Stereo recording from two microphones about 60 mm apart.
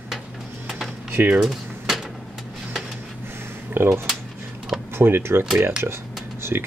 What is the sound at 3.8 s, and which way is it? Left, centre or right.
Speech, right.